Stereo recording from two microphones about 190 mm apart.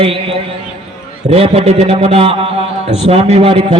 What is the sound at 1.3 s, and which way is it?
A man's voice, 30° right (ahead or behind).